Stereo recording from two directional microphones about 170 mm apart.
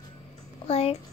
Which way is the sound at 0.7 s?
35° left (ahead or behind).